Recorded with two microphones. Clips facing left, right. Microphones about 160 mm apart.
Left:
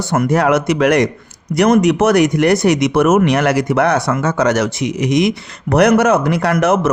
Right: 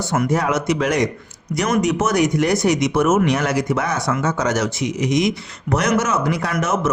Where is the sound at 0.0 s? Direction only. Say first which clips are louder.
Left 5 dB; 60° left (ahead or behind).